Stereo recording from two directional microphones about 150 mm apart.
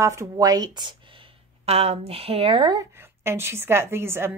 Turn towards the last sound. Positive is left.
turn(degrees=-15)  # may be behind; listen again after turning